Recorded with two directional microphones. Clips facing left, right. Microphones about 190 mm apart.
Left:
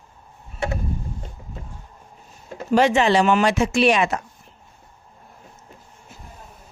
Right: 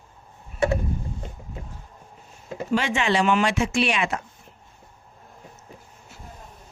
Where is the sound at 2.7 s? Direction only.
40° left (ahead or behind).